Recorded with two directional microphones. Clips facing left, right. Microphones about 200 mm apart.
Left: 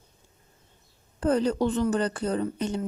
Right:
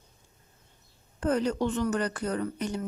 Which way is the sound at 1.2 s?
30° left (ahead or behind).